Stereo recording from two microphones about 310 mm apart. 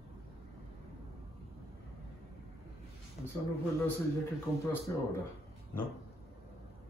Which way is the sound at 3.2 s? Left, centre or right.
Left.